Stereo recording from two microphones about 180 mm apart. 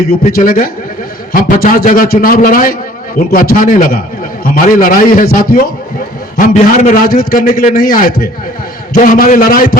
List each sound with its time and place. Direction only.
0.1 s a man's voice: 55° left (ahead or behind)